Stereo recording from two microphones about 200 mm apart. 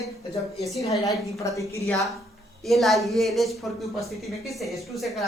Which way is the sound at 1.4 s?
15° left (ahead or behind).